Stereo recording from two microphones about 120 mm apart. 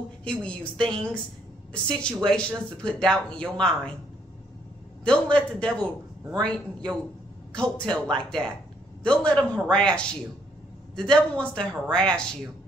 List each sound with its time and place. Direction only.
0.2 s speech: 10° left (ahead or behind)
5.0 s speech: 10° left (ahead or behind)